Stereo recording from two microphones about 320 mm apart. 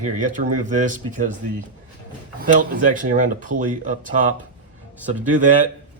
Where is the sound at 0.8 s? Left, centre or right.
Right.